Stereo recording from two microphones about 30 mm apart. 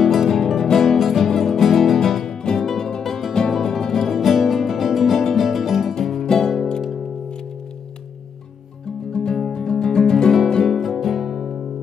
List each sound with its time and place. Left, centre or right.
0.0 s music: centre
0.4 s music: centre
1.3 s music: centre
1.6 s music: centre
6.2 s music: centre
8.8 s music: left
10.6 s music: centre
11.0 s music: centre